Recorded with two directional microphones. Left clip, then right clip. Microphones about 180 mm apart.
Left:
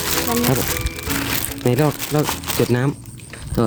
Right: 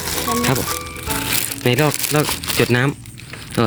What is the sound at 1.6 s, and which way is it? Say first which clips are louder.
Speech: right 1 dB; 5° left (ahead or behind).